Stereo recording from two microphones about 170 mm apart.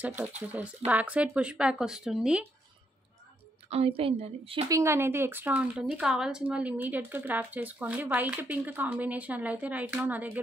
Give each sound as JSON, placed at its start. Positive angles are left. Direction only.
{"t": 0.5, "sound": "speech", "side_deg": -10}
{"t": 3.6, "sound": "a woman's voice", "side_deg": -35}
{"t": 4.6, "sound": "speech", "side_deg": -15}